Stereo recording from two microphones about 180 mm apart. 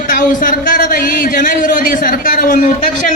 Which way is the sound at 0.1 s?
50° left (ahead or behind).